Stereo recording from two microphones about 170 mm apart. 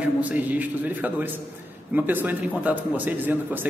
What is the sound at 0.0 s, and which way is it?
A man's voice, 10° right (ahead or behind).